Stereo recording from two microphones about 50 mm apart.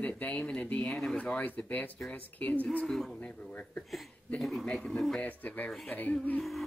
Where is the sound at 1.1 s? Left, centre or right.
Left.